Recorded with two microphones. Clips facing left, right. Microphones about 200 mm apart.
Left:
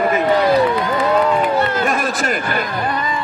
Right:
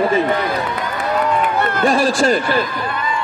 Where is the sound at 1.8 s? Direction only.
30° right (ahead or behind).